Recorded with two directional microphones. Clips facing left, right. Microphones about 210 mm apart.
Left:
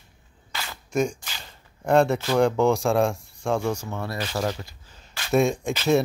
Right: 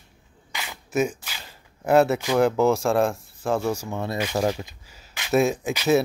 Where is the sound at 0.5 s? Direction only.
15° right (ahead or behind).